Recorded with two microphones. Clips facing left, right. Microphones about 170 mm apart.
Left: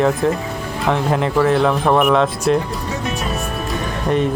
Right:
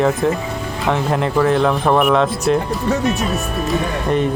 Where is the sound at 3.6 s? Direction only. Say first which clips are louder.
Right 2 dB; centre (ahead or behind).